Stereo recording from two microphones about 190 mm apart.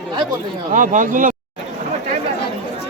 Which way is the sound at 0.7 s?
40° right (ahead or behind).